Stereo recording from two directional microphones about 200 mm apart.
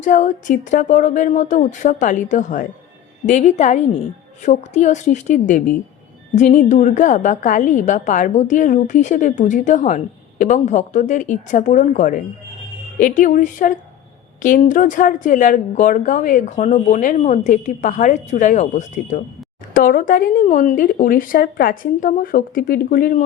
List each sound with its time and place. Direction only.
0.0 s a woman's voice: 40° left (ahead or behind)